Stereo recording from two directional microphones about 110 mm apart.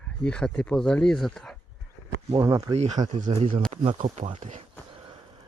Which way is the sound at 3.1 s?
65° right (ahead or behind).